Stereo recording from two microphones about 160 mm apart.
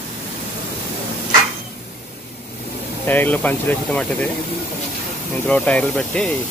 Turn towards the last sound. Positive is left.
turn(degrees=5)  # may be behind; listen again after turning